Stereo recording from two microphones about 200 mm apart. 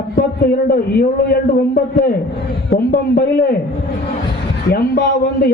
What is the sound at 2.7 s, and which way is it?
Speech, 50° left (ahead or behind).